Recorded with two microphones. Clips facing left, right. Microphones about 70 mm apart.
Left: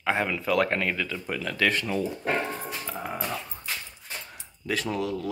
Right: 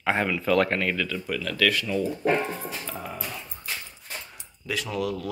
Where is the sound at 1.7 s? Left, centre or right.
Left.